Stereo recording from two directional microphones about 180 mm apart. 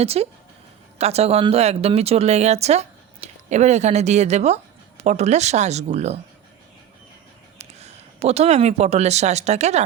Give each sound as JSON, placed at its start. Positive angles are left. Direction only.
{"t": 0.0, "sound": "speech", "side_deg": -35}
{"t": 7.6, "sound": "speech", "side_deg": -35}